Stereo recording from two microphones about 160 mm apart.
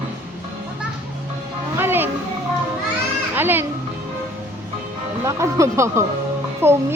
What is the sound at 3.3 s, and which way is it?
Music, 10° right (ahead or behind).